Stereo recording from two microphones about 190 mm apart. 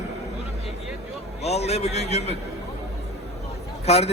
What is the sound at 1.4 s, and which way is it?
Speech, 35° left (ahead or behind).